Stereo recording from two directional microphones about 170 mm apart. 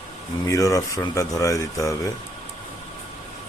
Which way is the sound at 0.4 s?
20° left (ahead or behind).